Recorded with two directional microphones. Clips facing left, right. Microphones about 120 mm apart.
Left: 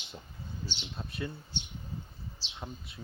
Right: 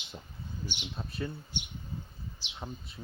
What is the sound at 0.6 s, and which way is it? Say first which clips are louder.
Speech: right 2 dB; 15° right (ahead or behind).